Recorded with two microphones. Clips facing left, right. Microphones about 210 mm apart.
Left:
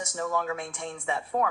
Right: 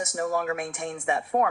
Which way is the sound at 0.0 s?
60° right (ahead or behind).